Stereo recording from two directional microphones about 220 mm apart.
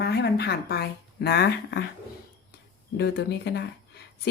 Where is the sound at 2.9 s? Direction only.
50° left (ahead or behind).